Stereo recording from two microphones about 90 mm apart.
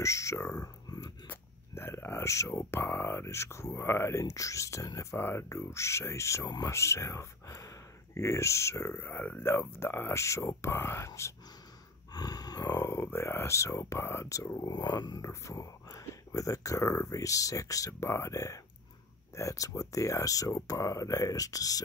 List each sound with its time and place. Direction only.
0.0 s a sound: 35° left (ahead or behind)
1.3 s speech: 25° left (ahead or behind)
12.1 s a sound: 45° left (ahead or behind)
12.7 s speech: 30° left (ahead or behind)
14.5 s speech: 50° left (ahead or behind)
15.2 s speech: 35° left (ahead or behind)